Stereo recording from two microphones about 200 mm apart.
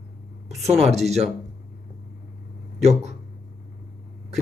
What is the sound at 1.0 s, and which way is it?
Speech, 35° right (ahead or behind).